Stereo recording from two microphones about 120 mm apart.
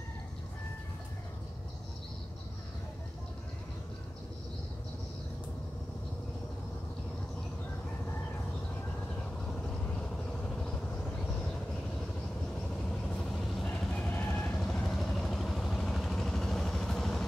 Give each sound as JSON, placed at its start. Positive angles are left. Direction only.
{"t": 10.5, "sound": "vehicle", "side_deg": 5}
{"t": 12.9, "sound": "vehicle", "side_deg": 5}